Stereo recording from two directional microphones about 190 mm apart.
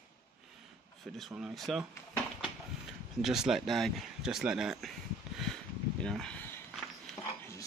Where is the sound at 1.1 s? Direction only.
Centre (ahead or behind).